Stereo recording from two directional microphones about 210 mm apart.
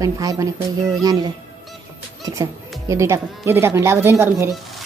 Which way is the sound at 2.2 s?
15° right (ahead or behind).